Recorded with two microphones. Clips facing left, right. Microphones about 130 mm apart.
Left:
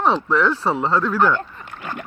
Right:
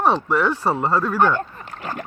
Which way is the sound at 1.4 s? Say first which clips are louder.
Right 2 dB; 40° right (ahead or behind).